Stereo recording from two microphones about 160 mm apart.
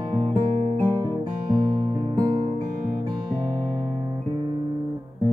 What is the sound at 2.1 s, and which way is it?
Music, 30° right (ahead or behind).